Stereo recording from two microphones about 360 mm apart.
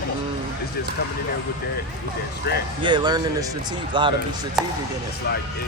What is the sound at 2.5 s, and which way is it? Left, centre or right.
Speech, left.